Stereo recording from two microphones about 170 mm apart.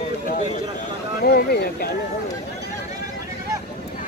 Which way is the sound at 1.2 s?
70° left (ahead or behind).